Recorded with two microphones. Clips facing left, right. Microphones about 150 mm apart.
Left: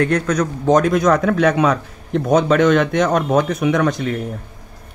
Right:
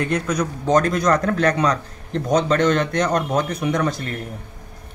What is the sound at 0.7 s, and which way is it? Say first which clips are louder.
Speech: left 4 dB; centre (ahead or behind).